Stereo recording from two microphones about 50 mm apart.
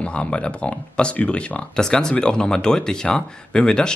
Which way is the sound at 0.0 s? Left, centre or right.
Left.